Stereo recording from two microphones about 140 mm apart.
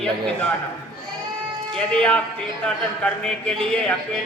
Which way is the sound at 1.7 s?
5° left (ahead or behind).